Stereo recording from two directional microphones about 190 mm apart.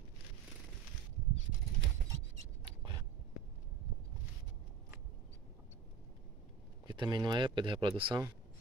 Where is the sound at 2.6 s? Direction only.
25° right (ahead or behind).